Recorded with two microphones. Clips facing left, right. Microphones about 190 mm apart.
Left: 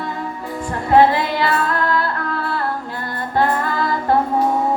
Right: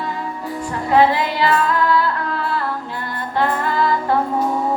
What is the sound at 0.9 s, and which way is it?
Music, 45° left (ahead or behind).